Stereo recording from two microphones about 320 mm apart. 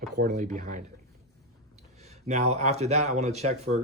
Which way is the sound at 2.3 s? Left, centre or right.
Right.